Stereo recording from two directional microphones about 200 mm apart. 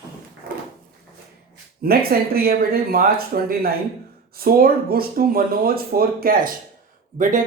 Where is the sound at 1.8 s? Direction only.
50° right (ahead or behind).